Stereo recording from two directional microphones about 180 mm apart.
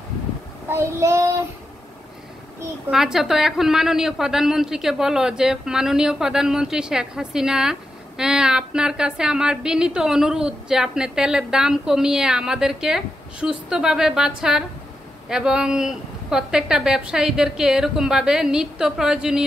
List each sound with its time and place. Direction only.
0.7 s child singing: 15° right (ahead or behind)
2.9 s a woman's voice: 5° right (ahead or behind)